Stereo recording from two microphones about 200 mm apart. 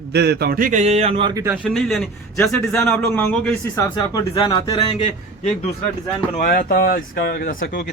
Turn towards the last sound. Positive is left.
turn(degrees=45)  # may be behind; listen again after turning